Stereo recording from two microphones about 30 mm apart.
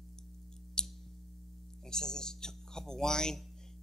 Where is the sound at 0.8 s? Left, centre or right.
Left.